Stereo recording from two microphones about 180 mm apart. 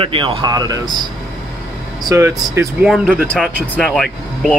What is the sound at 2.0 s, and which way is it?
Speech, 15° right (ahead or behind).